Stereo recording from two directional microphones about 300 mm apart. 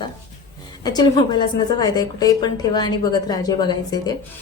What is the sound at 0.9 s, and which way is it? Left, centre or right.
A woman's voice, centre.